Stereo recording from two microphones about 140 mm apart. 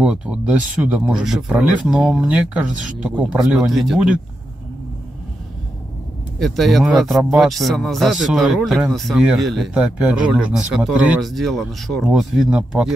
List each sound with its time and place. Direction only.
0.0 s speech: 5° right (ahead or behind)
6.4 s speech: centre (ahead or behind)